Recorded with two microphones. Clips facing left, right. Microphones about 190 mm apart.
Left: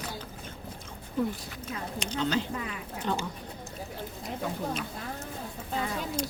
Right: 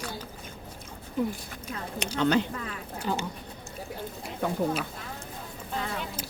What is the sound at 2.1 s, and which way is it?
Speech, 60° right (ahead or behind).